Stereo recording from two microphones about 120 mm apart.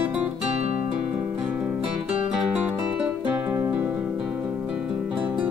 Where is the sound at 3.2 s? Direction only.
15° right (ahead or behind).